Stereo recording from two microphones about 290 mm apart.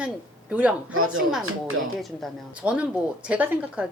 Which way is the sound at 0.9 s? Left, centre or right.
Right.